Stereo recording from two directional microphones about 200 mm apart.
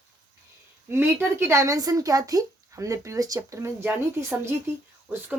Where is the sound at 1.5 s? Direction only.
15° right (ahead or behind).